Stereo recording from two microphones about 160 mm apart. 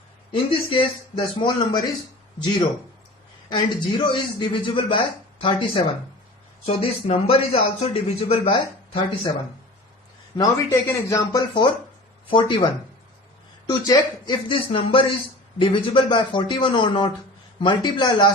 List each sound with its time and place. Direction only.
0.3 s speech: 30° left (ahead or behind)
3.5 s a man's voice: 30° left (ahead or behind)
10.3 s a man's voice: 20° left (ahead or behind)
13.7 s a man's voice: 25° left (ahead or behind)